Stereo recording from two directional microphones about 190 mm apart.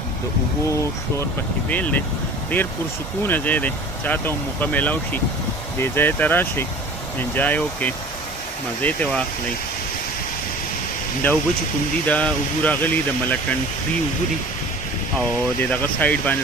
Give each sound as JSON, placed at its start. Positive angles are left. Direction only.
{"t": 0.7, "sound": "speech", "side_deg": 15}
{"t": 11.2, "sound": "speech", "side_deg": 10}
{"t": 15.7, "sound": "speech", "side_deg": 10}